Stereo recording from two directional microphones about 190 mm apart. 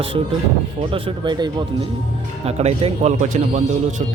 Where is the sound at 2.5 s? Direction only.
35° right (ahead or behind).